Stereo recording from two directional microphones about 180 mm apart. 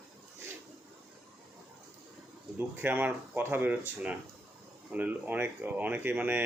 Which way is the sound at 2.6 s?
10° right (ahead or behind).